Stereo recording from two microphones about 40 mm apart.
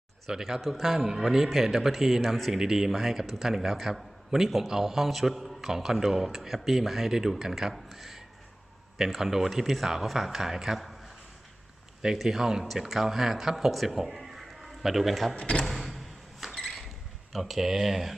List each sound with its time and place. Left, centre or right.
0.3 s a man's voice: centre
2.5 s a man's voice: centre
7.7 s a man's voice: centre
10.8 s a sound: centre
12.2 s speech: centre
15.4 s speech: left
15.6 s door: centre
16.6 s a sound: centre
17.3 s speech: centre